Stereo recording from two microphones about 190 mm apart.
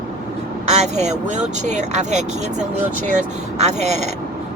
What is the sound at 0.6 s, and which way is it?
Speech, 35° right (ahead or behind).